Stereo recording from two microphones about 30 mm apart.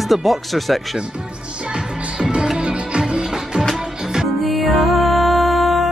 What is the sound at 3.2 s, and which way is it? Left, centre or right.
Music, right.